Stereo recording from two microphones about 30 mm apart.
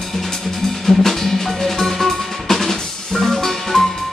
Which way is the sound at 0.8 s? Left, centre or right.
Centre.